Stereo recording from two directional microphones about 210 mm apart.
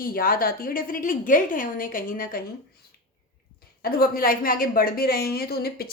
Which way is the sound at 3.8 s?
45° left (ahead or behind).